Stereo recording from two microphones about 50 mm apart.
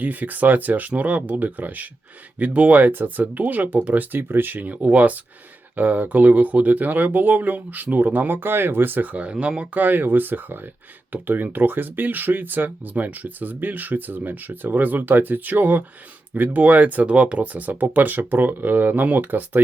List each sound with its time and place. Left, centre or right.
0.0 s speech: right
4.2 s speech: right
9.8 s speech: right